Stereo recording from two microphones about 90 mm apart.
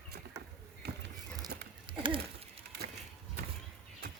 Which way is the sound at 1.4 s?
60° right (ahead or behind).